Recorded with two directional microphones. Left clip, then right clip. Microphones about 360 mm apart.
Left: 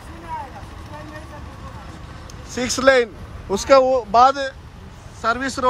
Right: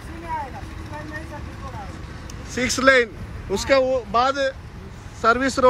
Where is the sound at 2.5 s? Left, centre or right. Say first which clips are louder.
Left 1 dB; centre.